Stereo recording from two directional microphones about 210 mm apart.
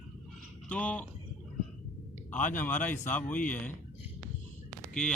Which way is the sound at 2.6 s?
10° left (ahead or behind).